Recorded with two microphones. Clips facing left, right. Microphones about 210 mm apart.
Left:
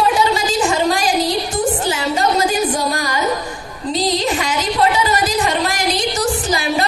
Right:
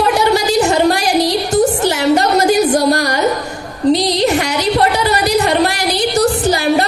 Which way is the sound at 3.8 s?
70° right (ahead or behind).